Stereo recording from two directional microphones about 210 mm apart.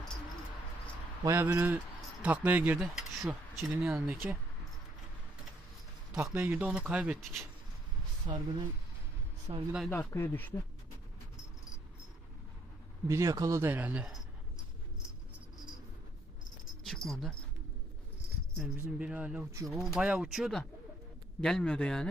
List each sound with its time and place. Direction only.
1.2 s speech: 10° right (ahead or behind)
6.1 s speech: 10° right (ahead or behind)
8.3 s speech: 25° right (ahead or behind)
9.5 s speech: 25° right (ahead or behind)
9.9 s speech: 10° left (ahead or behind)
13.1 s speech: 15° right (ahead or behind)
16.8 s dog: centre (ahead or behind)
18.5 s speech: 5° right (ahead or behind)